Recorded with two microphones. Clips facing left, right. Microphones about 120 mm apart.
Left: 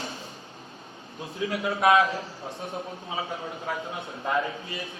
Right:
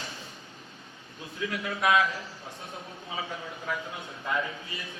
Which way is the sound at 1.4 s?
25° left (ahead or behind).